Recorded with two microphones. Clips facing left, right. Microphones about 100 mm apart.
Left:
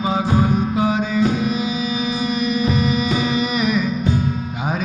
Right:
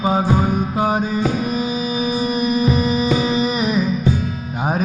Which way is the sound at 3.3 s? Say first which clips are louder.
Right 1 dB; 35° right (ahead or behind).